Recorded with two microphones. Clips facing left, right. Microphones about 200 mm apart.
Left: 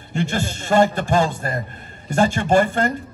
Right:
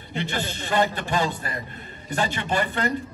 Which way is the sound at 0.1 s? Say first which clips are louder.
Left 5 dB; 45° left (ahead or behind).